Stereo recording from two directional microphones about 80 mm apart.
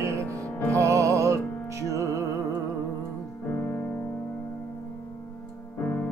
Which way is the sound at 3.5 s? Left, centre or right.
Left.